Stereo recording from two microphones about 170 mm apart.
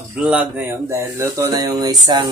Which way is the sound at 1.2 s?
20° right (ahead or behind).